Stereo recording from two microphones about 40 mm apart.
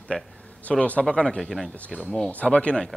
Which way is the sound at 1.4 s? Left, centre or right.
Centre.